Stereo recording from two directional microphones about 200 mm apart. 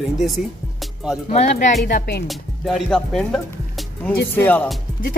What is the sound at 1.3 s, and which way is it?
Speech, 35° left (ahead or behind).